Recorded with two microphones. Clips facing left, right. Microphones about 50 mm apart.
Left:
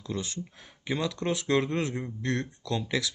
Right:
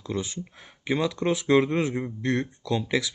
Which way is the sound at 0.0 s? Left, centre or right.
Centre.